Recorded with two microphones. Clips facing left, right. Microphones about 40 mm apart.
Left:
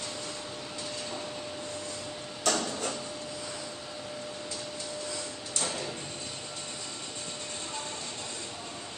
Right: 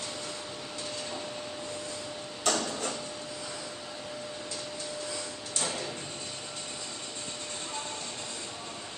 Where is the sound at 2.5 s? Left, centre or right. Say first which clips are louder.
Even; centre.